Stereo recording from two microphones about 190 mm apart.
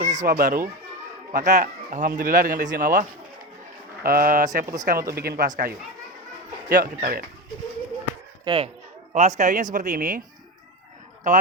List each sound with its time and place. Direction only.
0.0 s speech: 40° right (ahead or behind)
4.6 s speech: 20° right (ahead or behind)
4.9 s speech: 50° right (ahead or behind)
8.4 s speech: 25° right (ahead or behind)
9.1 s speech: 40° right (ahead or behind)
11.3 s speech: 40° right (ahead or behind)